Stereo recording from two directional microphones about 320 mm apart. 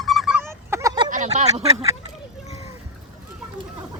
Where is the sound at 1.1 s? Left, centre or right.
Right.